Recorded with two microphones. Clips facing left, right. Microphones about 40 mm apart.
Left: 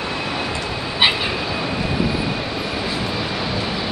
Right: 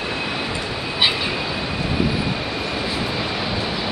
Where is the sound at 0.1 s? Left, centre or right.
Centre.